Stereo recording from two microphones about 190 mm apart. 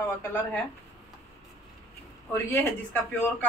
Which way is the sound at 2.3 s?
10° left (ahead or behind).